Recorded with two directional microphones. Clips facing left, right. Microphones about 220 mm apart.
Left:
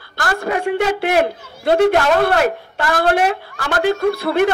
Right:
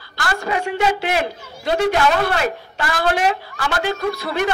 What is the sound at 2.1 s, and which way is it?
A woman's voice, 55° left (ahead or behind).